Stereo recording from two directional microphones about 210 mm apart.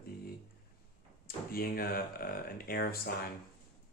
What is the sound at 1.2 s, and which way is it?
Speech, 45° left (ahead or behind).